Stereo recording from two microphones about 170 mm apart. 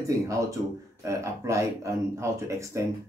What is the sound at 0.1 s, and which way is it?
Speech, 20° right (ahead or behind).